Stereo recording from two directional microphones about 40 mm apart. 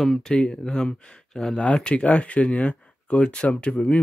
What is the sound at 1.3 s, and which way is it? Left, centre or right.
Speech, centre.